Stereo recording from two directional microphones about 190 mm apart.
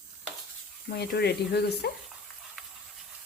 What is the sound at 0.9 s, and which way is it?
Speech, 60° left (ahead or behind).